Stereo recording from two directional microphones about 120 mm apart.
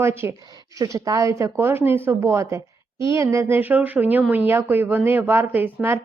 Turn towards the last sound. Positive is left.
turn(degrees=-15)  # may be behind; listen again after turning